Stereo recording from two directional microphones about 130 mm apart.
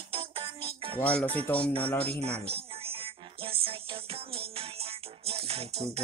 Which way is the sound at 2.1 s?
50° right (ahead or behind).